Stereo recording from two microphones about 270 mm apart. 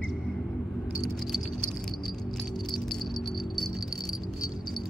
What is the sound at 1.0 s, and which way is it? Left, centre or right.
Keys jangling, centre.